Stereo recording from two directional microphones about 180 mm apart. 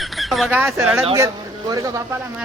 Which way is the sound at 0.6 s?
10° right (ahead or behind).